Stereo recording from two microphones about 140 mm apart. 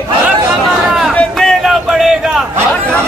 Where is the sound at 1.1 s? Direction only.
Centre (ahead or behind).